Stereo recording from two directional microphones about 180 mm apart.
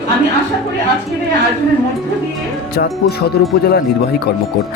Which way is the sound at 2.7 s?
60° left (ahead or behind).